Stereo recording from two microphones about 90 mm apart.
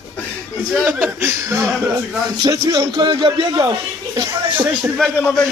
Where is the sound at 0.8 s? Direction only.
25° right (ahead or behind).